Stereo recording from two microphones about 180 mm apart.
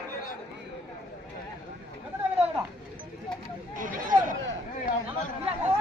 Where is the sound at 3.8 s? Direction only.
50° right (ahead or behind).